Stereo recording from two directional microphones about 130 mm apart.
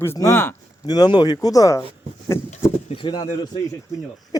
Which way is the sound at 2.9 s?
40° left (ahead or behind).